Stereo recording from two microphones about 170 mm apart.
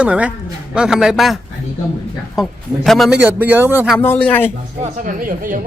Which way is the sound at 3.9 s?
10° left (ahead or behind).